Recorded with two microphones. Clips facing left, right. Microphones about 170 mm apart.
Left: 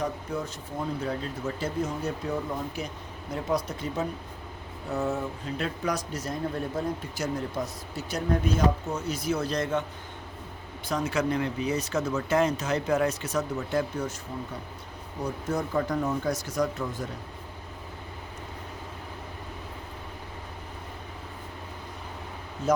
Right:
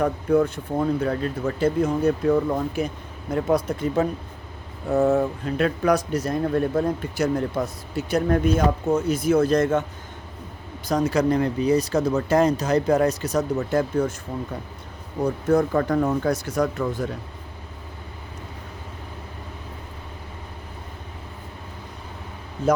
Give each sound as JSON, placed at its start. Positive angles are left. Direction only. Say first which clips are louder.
{"t": 0.0, "sound": "speech", "louder": "right 11 dB", "side_deg": -55}
{"t": 5.0, "sound": "speech", "louder": "right 10 dB", "side_deg": -65}
{"t": 10.8, "sound": "speech", "louder": "right 7 dB", "side_deg": -40}
{"t": 15.2, "sound": "speech", "louder": "right 10 dB", "side_deg": -55}